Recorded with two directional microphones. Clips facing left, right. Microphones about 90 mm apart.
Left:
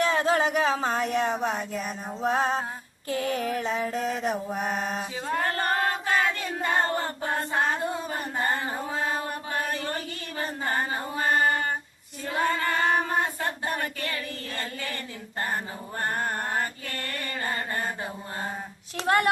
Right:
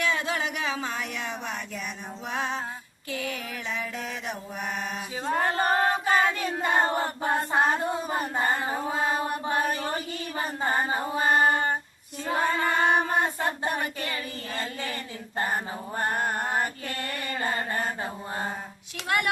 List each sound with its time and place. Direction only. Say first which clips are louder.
0.0 s child singing: left 5 dB; 40° left (ahead or behind)
5.2 s a sound: right 3 dB; 15° right (ahead or behind)
6.1 s choir: right 2 dB; 5° right (ahead or behind)
10.7 s a sound: right 3 dB; 15° right (ahead or behind)
12.5 s child singing: right 1 dB; 20° right (ahead or behind)
16.0 s mantra: right 1 dB; 10° right (ahead or behind)
18.9 s child singing: left 4 dB; 35° left (ahead or behind)